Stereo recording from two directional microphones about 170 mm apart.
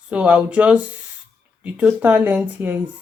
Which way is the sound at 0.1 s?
5° right (ahead or behind).